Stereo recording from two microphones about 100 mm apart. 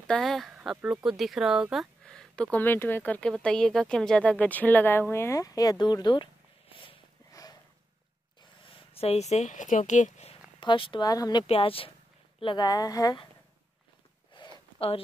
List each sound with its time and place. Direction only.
0.0 s speech: 5° left (ahead or behind)
2.0 s speech: 10° left (ahead or behind); by 6.2 s 45° left (ahead or behind)
7.4 s a sound: 40° left (ahead or behind)
8.4 s a sound: 60° left (ahead or behind); by 10.4 s 90° left
10.6 s speech: 55° left (ahead or behind)
11.1 s speech: 40° left (ahead or behind)
11.4 s speech: 75° left (ahead or behind)
12.5 s speech: 40° left (ahead or behind)
14.3 s a sound: 50° left (ahead or behind)